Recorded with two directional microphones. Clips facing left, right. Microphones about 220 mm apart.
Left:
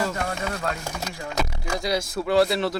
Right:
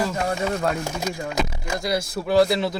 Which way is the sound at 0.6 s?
20° right (ahead or behind).